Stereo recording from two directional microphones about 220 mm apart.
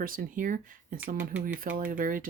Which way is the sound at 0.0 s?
40° right (ahead or behind).